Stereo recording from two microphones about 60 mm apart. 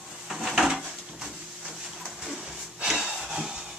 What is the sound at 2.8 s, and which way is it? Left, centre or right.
Breathing, centre.